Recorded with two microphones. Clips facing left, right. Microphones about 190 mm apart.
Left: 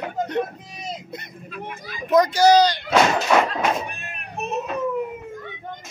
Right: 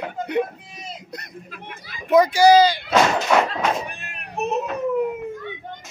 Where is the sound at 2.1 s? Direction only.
10° right (ahead or behind).